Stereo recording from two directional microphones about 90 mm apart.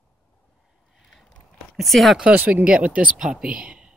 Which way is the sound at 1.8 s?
Centre (ahead or behind).